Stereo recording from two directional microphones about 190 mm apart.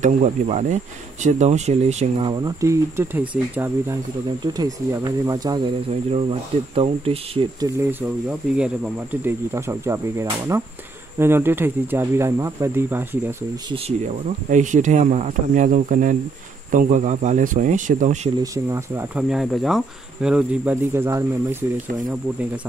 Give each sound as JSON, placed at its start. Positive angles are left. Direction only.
{"t": 0.0, "sound": "speech", "side_deg": -35}
{"t": 6.7, "sound": "speech", "side_deg": -30}
{"t": 8.3, "sound": "speech", "side_deg": -5}
{"t": 13.7, "sound": "speech", "side_deg": -35}
{"t": 18.4, "sound": "speech", "side_deg": -15}
{"t": 19.2, "sound": "speech", "side_deg": 0}